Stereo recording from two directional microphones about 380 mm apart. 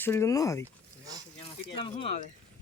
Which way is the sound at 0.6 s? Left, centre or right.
Centre.